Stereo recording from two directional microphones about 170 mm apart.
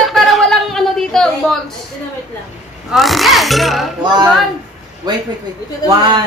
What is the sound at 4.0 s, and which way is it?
Speech, 25° right (ahead or behind).